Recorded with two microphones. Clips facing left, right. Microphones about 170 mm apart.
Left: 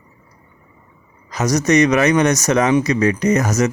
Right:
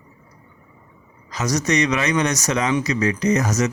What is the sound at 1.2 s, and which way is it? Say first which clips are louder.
A man's voice: left 5 dB; 50° left (ahead or behind).